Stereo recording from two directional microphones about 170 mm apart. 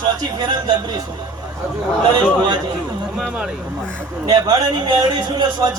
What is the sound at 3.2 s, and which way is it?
Speech, 5° right (ahead or behind).